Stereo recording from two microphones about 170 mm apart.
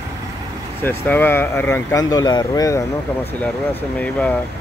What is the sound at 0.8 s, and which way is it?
Speech, 10° left (ahead or behind).